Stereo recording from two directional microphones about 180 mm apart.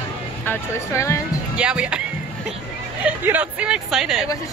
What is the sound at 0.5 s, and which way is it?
Speech, 15° left (ahead or behind).